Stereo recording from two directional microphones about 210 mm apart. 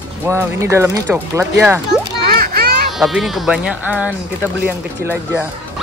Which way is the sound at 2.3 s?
50° right (ahead or behind).